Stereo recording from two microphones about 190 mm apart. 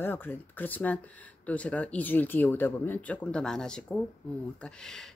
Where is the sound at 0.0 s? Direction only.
10° left (ahead or behind).